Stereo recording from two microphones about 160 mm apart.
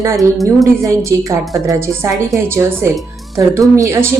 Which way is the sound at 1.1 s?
20° right (ahead or behind).